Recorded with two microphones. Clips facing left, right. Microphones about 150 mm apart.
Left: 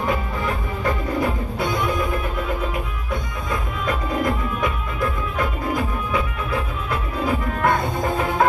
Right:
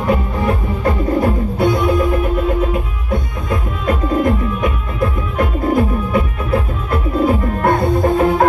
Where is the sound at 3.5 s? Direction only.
50° right (ahead or behind).